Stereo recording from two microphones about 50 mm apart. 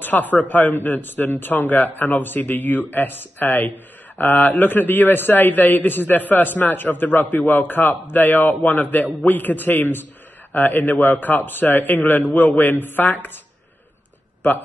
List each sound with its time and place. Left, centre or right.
0.0 s a man's voice: left